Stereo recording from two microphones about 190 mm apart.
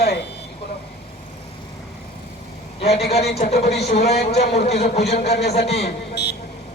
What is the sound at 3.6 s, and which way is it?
Speech, 60° left (ahead or behind).